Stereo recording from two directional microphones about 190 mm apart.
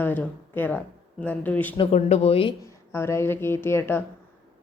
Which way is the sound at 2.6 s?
15° left (ahead or behind).